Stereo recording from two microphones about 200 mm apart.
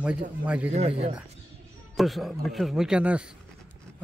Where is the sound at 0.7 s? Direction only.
35° right (ahead or behind).